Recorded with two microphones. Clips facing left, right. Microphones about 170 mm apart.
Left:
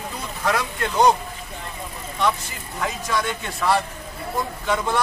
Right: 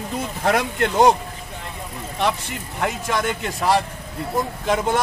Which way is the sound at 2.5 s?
65° right (ahead or behind).